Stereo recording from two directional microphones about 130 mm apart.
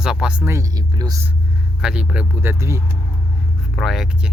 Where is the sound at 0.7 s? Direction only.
30° right (ahead or behind).